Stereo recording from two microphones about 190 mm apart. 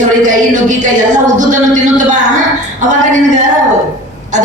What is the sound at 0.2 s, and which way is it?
A man's voice, 40° right (ahead or behind).